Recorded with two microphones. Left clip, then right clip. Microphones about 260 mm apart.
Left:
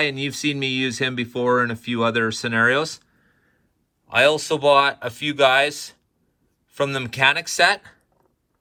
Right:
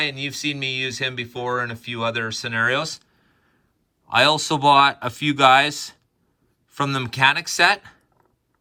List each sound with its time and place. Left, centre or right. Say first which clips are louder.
0.0 s speech: left 2 dB; centre